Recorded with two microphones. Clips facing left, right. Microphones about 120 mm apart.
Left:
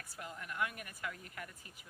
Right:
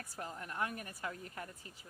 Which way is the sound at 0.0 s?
35° right (ahead or behind).